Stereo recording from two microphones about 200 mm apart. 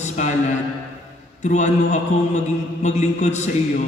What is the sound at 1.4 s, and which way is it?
A man's voice, 35° left (ahead or behind).